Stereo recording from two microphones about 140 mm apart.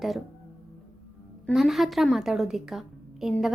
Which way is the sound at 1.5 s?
Centre (ahead or behind).